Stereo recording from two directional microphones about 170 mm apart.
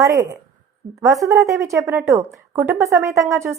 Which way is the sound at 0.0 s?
15° right (ahead or behind).